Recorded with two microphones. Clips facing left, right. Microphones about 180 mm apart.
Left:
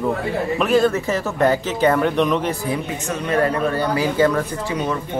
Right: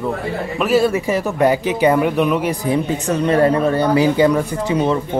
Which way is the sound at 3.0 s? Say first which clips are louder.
Right 5 dB; 30° right (ahead or behind).